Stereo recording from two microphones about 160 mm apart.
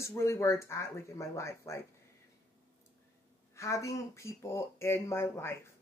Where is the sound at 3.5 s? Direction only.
20° left (ahead or behind).